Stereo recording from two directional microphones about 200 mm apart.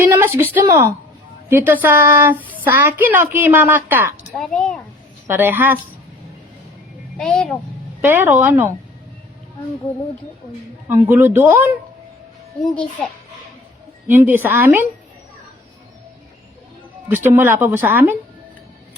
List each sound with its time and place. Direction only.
0.1 s a woman's voice: 10° right (ahead or behind)
4.4 s a child's voice: 5° left (ahead or behind)
5.3 s a woman's voice: 10° right (ahead or behind)
7.2 s a child's voice: 5° left (ahead or behind)
8.0 s a woman's voice: 10° right (ahead or behind)
10.8 s a woman's voice: 10° right (ahead or behind)
12.6 s a child's voice: 5° left (ahead or behind)
14.1 s a woman's voice: 10° right (ahead or behind)
17.1 s a woman's voice: 10° right (ahead or behind)